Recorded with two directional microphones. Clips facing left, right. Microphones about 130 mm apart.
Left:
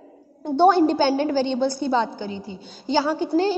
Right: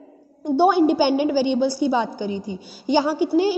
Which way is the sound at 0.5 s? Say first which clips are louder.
Even; 5° right (ahead or behind).